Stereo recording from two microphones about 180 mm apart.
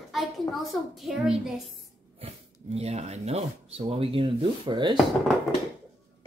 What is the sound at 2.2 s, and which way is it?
Speech, 35° right (ahead or behind).